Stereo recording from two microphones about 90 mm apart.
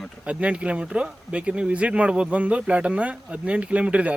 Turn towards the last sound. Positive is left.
turn(degrees=-15)  # may be behind; listen again after turning